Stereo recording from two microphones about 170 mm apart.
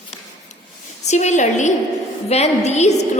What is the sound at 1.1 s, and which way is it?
A woman's voice, 45° left (ahead or behind).